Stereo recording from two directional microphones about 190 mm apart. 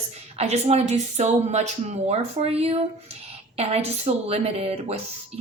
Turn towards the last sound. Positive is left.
turn(degrees=-30)  # may be behind; listen again after turning